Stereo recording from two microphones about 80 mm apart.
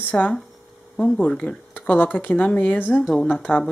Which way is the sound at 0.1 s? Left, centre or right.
Centre.